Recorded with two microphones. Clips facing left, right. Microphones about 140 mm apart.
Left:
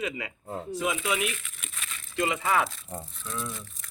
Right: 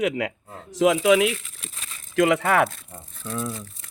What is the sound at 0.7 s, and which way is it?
Speech, 90° right.